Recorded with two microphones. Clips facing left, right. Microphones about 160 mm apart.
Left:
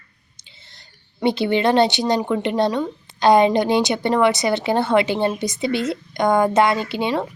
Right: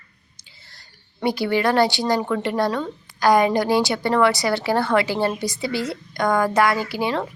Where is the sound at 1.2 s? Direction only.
25° left (ahead or behind).